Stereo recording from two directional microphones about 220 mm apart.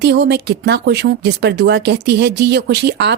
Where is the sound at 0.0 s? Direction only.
50° right (ahead or behind).